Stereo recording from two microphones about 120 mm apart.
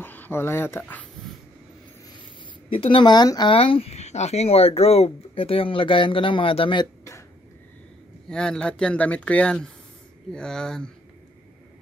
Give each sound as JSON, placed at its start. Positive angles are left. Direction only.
{"t": 0.0, "sound": "speech", "side_deg": 15}
{"t": 2.7, "sound": "speech", "side_deg": 45}
{"t": 3.5, "sound": "speech", "side_deg": 50}
{"t": 8.3, "sound": "speech", "side_deg": 5}